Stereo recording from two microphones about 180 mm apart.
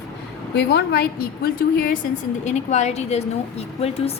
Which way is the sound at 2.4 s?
40° left (ahead or behind).